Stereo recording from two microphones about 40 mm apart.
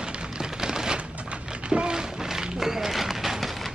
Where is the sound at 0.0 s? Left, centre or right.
Right; by 3.7 s centre.